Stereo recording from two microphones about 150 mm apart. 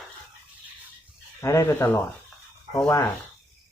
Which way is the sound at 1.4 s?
20° left (ahead or behind).